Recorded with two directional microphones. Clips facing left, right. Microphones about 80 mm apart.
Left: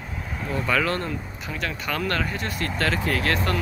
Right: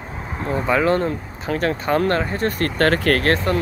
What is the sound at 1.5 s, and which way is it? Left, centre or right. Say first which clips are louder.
Speech: right 10 dB; right.